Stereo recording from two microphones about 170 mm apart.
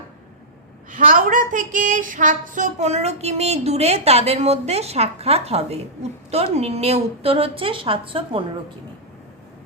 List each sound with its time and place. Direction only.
0.9 s speech: 50° right (ahead or behind); by 8.4 s 30° right (ahead or behind)